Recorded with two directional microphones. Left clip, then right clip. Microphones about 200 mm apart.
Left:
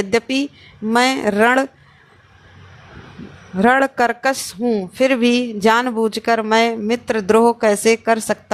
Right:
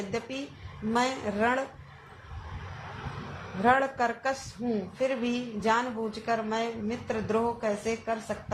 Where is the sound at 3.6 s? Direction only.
65° left (ahead or behind).